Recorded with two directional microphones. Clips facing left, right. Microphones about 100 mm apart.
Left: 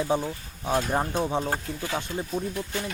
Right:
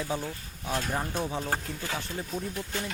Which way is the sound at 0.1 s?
25° left (ahead or behind).